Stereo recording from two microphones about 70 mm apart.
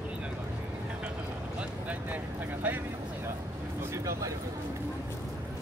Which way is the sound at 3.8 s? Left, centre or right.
Right.